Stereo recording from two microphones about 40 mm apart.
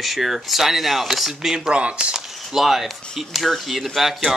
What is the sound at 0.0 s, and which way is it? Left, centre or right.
Speech, centre.